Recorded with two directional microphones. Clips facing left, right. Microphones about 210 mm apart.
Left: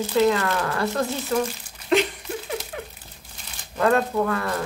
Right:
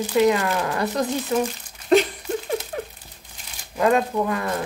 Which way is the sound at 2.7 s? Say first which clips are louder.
Right 4 dB; 35° right (ahead or behind).